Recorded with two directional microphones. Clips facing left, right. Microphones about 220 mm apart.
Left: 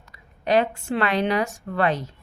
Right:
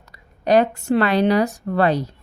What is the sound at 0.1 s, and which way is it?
A woman's voice, 40° right (ahead or behind).